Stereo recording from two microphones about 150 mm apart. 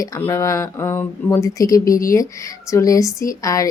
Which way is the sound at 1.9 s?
70° left (ahead or behind).